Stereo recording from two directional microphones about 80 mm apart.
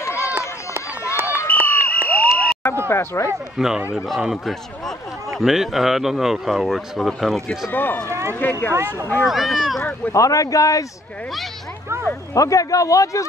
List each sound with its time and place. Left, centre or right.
0.0 s run: left
1.5 s a sound: centre
2.0 s fire alarm: centre
2.9 s speech: left
3.5 s a man's voice: centre
7.7 s speech: left
8.1 s speech: right
8.4 s speech: left
8.7 s speech: right
9.2 s a man's voice: centre
10.1 s speech: left
12.4 s speech: left